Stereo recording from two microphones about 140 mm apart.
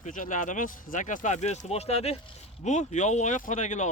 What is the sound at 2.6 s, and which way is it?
Speech, 60° left (ahead or behind).